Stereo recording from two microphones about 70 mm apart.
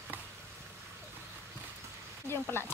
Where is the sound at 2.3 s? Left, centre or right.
Left.